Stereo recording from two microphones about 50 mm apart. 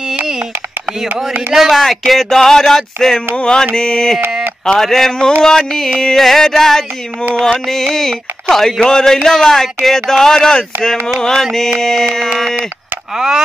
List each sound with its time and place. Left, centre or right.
1.5 s speech: centre
3.3 s speech: centre